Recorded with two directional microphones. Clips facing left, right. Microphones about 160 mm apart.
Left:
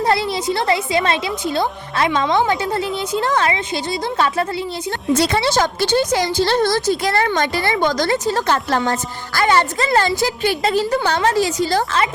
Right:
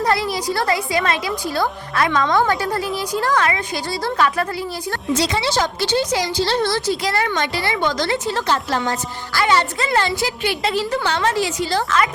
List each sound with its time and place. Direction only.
0.0 s a woman's voice: 25° left (ahead or behind)
5.1 s a woman's voice: 55° left (ahead or behind); by 12.0 s 35° left (ahead or behind)